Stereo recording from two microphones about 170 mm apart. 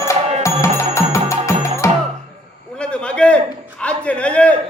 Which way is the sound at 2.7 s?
5° left (ahead or behind).